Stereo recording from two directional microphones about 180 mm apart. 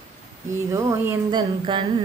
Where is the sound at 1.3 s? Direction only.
25° right (ahead or behind).